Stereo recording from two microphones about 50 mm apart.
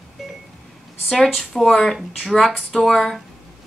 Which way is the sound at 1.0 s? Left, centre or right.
Centre.